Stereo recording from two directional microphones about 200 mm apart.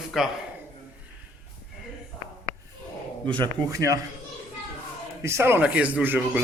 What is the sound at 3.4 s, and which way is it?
Speech, 15° right (ahead or behind).